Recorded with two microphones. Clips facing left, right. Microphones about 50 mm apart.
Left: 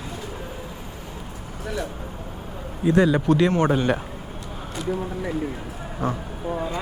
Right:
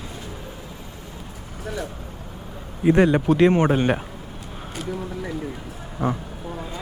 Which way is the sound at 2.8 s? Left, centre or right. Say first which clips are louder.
Right 2 dB; right.